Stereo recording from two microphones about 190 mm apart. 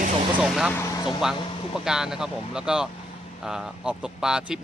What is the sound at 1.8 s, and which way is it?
Speech, 5° right (ahead or behind).